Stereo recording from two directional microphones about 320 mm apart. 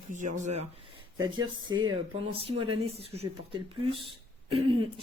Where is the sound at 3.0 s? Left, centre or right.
Centre.